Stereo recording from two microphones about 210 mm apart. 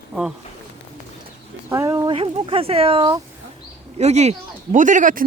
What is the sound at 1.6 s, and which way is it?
Speech, 15° right (ahead or behind).